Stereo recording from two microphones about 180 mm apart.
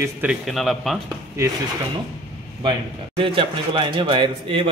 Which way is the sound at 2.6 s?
25° right (ahead or behind).